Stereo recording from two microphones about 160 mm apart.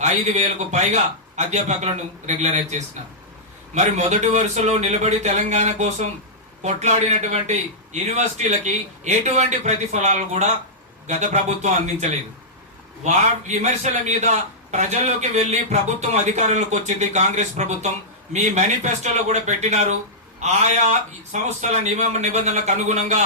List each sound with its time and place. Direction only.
0.0 s a man's voice: 45° right (ahead or behind)
13.1 s a man's voice: 45° right (ahead or behind)